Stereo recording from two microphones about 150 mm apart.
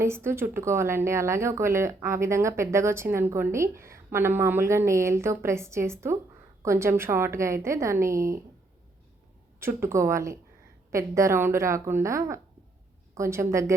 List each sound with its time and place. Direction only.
0.0 s a woman's voice: 15° right (ahead or behind)
9.6 s a woman's voice: 15° right (ahead or behind)